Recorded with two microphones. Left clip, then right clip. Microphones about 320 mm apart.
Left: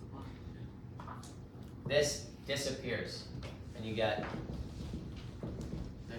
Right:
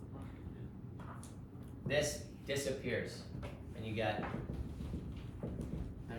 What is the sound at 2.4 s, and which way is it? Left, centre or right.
Speech, centre.